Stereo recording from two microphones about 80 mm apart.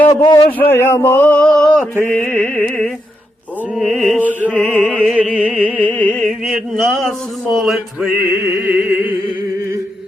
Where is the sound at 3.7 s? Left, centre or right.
Centre.